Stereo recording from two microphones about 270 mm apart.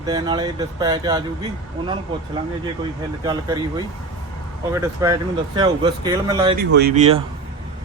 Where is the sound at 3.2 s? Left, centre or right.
Centre.